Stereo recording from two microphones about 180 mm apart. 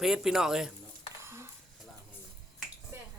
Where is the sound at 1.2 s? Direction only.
15° right (ahead or behind).